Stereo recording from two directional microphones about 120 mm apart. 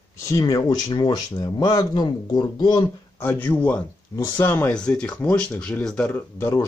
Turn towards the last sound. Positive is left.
turn(degrees=20)  # may be behind; listen again after turning